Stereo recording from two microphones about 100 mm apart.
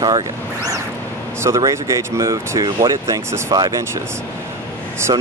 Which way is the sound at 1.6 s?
30° right (ahead or behind).